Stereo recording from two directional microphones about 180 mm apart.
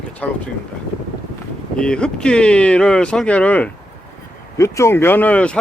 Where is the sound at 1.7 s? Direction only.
5° left (ahead or behind).